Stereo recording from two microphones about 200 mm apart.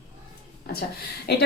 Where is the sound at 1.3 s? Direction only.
55° left (ahead or behind).